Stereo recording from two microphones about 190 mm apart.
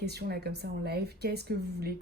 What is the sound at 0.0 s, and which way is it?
Speech, 60° right (ahead or behind).